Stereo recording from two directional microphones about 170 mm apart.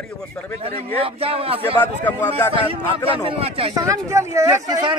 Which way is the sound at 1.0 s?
35° right (ahead or behind).